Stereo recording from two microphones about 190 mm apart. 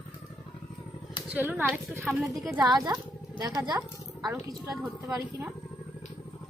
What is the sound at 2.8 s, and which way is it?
Speech, 20° right (ahead or behind).